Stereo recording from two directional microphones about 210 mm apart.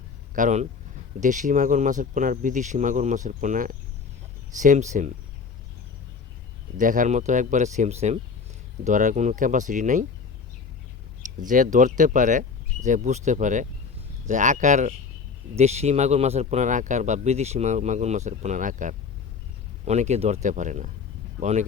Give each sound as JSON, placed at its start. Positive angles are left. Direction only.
{"t": 0.3, "sound": "speech", "side_deg": -35}
{"t": 6.7, "sound": "speech", "side_deg": -40}
{"t": 11.3, "sound": "speech", "side_deg": -40}